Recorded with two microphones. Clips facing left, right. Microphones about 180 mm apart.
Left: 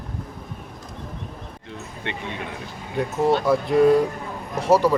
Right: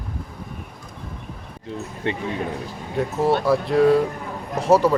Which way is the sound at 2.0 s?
35° right (ahead or behind).